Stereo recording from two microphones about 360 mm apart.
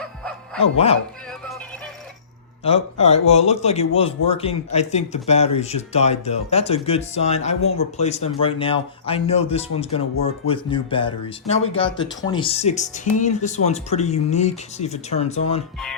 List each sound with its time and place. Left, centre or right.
0.0 s music: centre
0.6 s speech: centre
2.6 s speech: centre
7.6 s speech: left
7.9 s speech: centre